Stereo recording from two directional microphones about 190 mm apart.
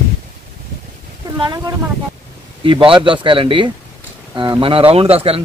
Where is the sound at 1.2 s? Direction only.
20° right (ahead or behind).